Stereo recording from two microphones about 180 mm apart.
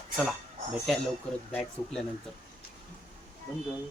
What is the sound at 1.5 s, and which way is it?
Speech, 5° left (ahead or behind).